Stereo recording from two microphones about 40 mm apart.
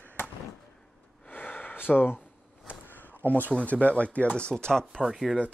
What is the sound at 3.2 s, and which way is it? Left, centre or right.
Speech, right.